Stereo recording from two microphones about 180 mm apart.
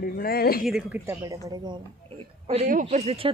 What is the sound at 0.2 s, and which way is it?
Speech, 55° left (ahead or behind).